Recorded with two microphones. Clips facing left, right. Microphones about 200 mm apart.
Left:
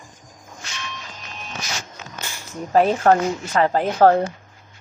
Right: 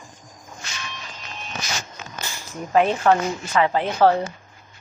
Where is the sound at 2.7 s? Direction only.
40° left (ahead or behind).